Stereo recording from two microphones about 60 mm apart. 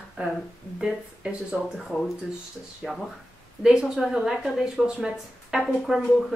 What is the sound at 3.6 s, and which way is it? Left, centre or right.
Speech, centre.